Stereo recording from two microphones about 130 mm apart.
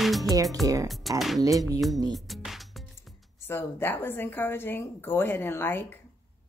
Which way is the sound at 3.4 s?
20° left (ahead or behind).